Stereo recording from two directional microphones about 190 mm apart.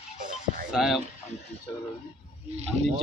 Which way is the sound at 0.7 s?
Centre (ahead or behind).